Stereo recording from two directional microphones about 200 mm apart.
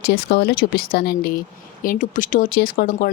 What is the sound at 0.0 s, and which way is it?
Speech, 60° left (ahead or behind).